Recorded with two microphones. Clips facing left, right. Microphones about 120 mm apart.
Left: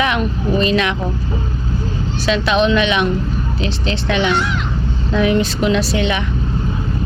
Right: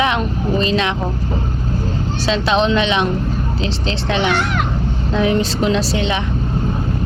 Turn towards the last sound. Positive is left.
turn(degrees=-30)  # may be behind; listen again after turning